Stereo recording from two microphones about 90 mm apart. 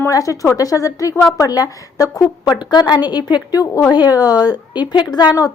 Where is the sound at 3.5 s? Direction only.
40° left (ahead or behind).